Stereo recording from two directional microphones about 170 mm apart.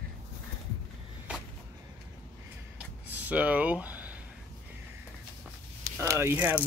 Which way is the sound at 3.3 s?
10° right (ahead or behind).